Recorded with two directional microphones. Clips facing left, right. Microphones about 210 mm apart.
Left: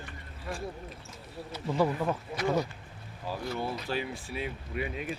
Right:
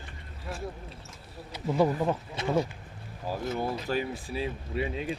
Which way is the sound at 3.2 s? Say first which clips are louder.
Right 3 dB; 45° right (ahead or behind).